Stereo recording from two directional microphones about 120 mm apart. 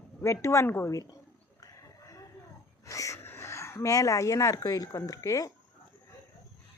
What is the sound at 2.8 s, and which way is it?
Speech, 25° left (ahead or behind).